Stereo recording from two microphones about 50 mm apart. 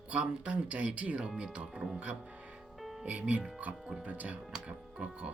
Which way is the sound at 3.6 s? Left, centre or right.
Right.